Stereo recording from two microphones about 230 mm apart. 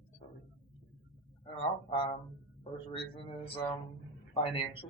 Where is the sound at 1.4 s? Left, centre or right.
Left.